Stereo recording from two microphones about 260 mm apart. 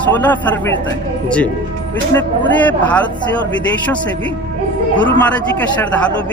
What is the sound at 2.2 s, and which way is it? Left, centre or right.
Speech, centre.